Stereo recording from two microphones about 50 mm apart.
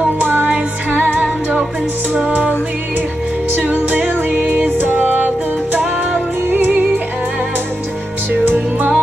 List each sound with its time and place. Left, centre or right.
0.2 s music: right
3.7 s music: right
4.3 s music: right
8.3 s music: right